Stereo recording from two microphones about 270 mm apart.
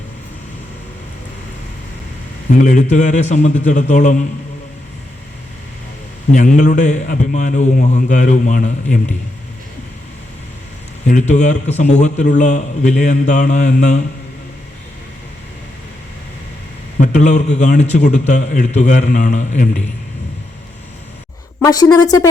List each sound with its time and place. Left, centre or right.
2.5 s a man's voice: left
6.3 s a man's voice: left
11.0 s a man's voice: left
17.0 s a man's voice: left
21.6 s a woman's voice: centre